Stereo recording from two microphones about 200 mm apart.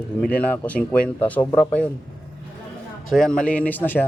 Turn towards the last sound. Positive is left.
turn(degrees=10)  # may be behind; listen again after turning